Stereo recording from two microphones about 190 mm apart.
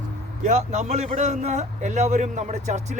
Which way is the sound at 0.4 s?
35° right (ahead or behind).